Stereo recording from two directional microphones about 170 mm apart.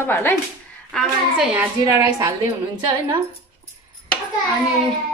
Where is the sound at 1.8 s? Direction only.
15° right (ahead or behind).